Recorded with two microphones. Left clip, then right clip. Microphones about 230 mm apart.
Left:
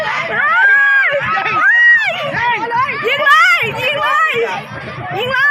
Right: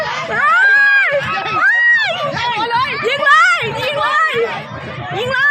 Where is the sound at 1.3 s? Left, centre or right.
Left.